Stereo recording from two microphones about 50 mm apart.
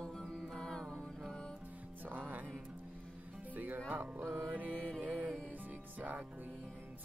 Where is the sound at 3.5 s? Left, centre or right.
Right.